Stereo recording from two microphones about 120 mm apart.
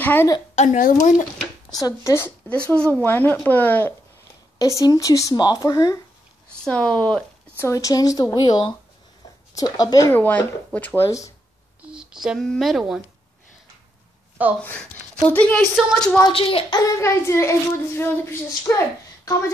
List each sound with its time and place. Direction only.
0.0 s a woman's voice: 15° left (ahead or behind)
0.6 s speech: 90° left
1.7 s a child's voice: 30° left (ahead or behind)
2.7 s speech: 15° left (ahead or behind)
4.6 s a child's voice: 30° left (ahead or behind)
6.6 s speech: 10° left (ahead or behind)
7.5 s a child's voice: 25° left (ahead or behind)
10.1 s speech: 15° left (ahead or behind)
11.1 s a child's voice: 25° left (ahead or behind)
11.8 s speech: 5° right (ahead or behind)
14.6 s speech: 10° left (ahead or behind)
16.2 s a woman's voice: 45° left (ahead or behind)
16.7 s a child's voice: 25° left (ahead or behind)